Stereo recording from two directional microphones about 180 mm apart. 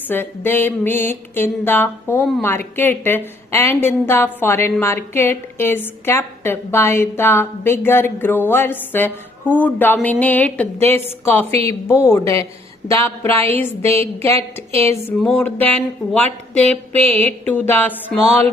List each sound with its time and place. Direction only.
0.1 s a woman's voice: 10° left (ahead or behind)
11.5 s a woman's voice: 35° right (ahead or behind)
11.9 s a woman's voice: 15° left (ahead or behind)
14.3 s a woman's voice: 35° right (ahead or behind)
15.2 s a woman's voice: 5° left (ahead or behind)